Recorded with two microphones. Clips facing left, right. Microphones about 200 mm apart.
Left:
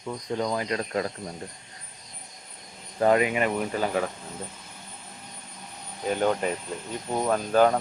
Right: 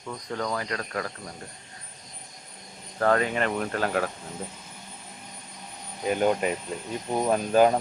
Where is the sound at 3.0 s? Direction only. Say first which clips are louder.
Left 2 dB; 15° left (ahead or behind).